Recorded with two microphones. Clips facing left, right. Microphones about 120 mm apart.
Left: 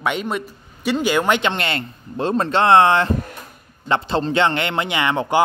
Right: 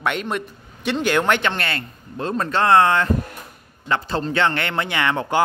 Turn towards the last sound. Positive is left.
turn(degrees=15)  # may be behind; listen again after turning